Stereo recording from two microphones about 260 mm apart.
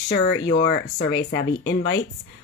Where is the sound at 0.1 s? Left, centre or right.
Left.